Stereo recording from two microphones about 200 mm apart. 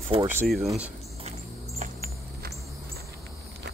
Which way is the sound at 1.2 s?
35° right (ahead or behind).